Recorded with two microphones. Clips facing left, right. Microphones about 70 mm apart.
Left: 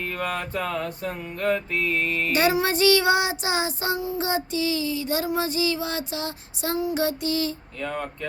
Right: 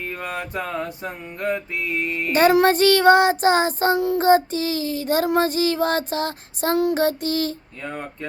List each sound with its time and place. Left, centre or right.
0.0 s mantra: centre
2.5 s child singing: right
7.8 s mantra: right